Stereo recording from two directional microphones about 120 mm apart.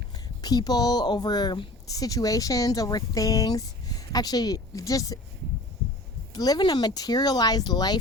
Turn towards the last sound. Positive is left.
turn(degrees=35)  # may be behind; listen again after turning